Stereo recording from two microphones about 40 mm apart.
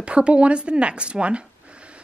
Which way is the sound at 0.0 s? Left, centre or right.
Right.